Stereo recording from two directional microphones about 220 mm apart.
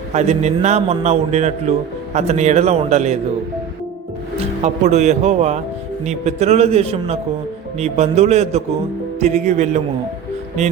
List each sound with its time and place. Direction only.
0.1 s a man's voice: 30° right (ahead or behind)
4.6 s a man's voice: 30° right (ahead or behind)